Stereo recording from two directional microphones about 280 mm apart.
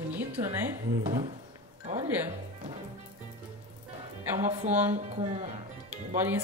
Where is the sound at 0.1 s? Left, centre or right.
Centre.